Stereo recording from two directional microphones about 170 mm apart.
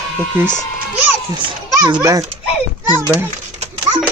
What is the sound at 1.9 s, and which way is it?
A child's voice, 20° right (ahead or behind).